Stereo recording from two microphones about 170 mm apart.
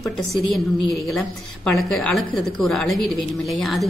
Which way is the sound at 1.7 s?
Centre (ahead or behind).